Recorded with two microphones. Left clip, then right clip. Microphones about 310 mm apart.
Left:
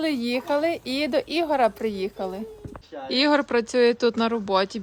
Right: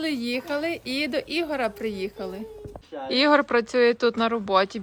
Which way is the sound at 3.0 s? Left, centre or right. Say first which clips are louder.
Right 1 dB; centre.